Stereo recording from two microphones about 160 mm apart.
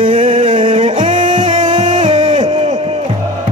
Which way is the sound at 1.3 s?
30° right (ahead or behind).